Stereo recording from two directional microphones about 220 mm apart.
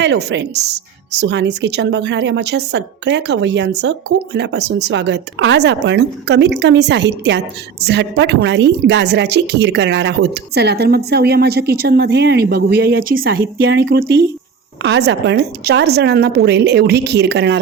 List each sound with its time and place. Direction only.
0.0 s speech: 50° right (ahead or behind)